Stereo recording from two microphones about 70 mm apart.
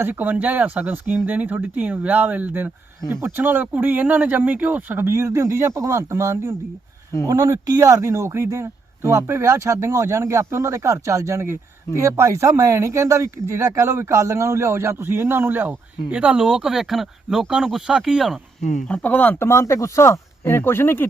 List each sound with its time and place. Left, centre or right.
0.0 s speech: right
3.1 s speech: right
3.3 s speech: right
5.0 s a man's voice: right
16.1 s speech: centre
18.9 s speech: left
19.4 s speech: left